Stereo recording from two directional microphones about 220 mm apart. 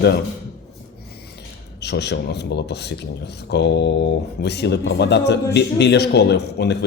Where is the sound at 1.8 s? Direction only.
50° left (ahead or behind).